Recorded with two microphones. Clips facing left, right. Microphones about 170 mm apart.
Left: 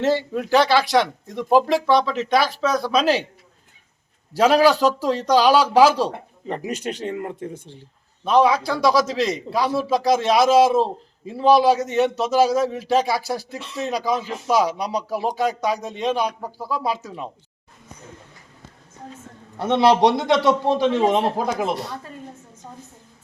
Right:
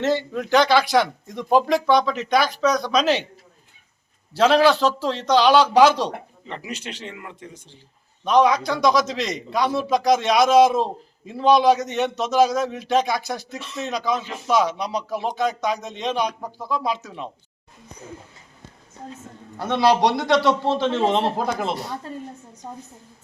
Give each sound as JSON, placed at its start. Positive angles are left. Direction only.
{"t": 0.0, "sound": "speech", "side_deg": 10}
{"t": 4.4, "sound": "a man's voice", "side_deg": 10}
{"t": 6.5, "sound": "speech", "side_deg": 45}
{"t": 8.2, "sound": "a man's voice", "side_deg": 5}
{"t": 19.5, "sound": "a man's voice", "side_deg": 25}